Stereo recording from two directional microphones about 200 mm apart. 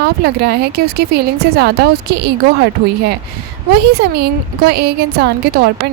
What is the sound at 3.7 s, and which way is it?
A woman's voice, 55° right (ahead or behind).